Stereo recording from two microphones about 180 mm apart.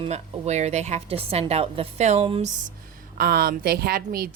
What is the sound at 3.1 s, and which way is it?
A woman's voice, 60° right (ahead or behind).